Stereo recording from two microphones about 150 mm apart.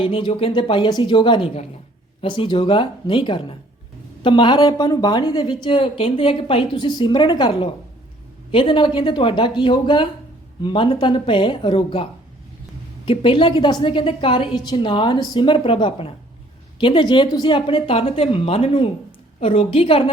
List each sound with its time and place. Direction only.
0.0 s a woman's voice: 35° left (ahead or behind)
13.1 s a woman's voice: 35° left (ahead or behind)